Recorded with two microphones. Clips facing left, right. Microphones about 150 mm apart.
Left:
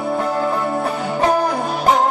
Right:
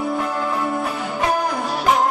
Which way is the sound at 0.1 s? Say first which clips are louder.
Left 3 dB; 35° left (ahead or behind).